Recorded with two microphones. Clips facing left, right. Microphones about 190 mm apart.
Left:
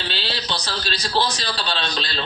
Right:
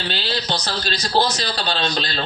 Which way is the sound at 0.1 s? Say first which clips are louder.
Right 4 dB; 45° right (ahead or behind).